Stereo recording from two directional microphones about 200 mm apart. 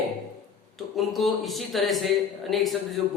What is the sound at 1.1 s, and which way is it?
A man's voice, centre (ahead or behind).